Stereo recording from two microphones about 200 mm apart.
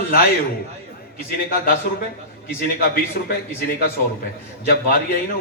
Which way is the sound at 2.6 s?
45° left (ahead or behind).